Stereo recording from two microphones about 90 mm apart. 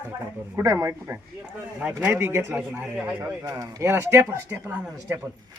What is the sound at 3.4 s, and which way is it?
Speech, 40° right (ahead or behind).